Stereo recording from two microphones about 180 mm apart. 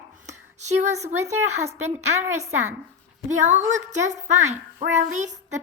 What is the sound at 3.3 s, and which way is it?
A woman's voice, 40° right (ahead or behind).